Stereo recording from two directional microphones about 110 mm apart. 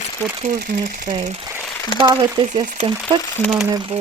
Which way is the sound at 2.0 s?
40° right (ahead or behind).